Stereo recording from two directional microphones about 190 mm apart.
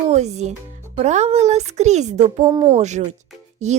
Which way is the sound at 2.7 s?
35° right (ahead or behind).